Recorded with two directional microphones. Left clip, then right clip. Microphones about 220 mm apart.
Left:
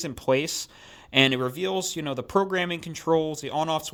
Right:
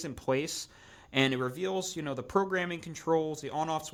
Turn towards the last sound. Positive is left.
turn(degrees=25)  # may be behind; listen again after turning